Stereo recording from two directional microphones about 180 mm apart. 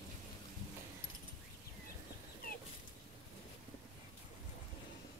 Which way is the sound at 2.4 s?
50° left (ahead or behind).